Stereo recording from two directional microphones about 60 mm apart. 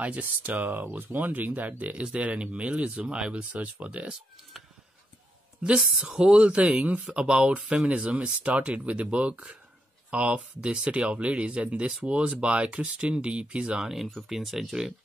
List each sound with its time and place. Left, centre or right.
0.0 s speech: right
5.8 s speech: centre